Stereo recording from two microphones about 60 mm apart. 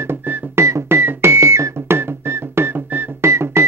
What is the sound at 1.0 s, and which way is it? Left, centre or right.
Music, right.